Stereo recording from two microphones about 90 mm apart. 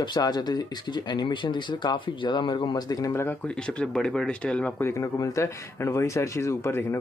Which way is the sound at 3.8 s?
10° left (ahead or behind).